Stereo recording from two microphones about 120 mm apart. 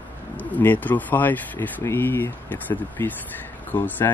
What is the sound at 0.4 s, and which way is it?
Speech, 15° left (ahead or behind).